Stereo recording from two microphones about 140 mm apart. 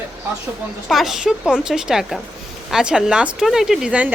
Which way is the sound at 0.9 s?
Centre (ahead or behind).